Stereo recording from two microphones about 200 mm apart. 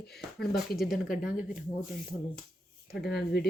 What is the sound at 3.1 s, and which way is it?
Speech, 55° left (ahead or behind).